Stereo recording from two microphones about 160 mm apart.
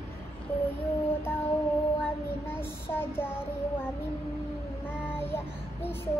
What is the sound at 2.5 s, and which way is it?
Child singing, 15° left (ahead or behind).